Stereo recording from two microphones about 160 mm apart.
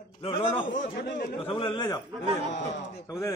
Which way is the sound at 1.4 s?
35° left (ahead or behind).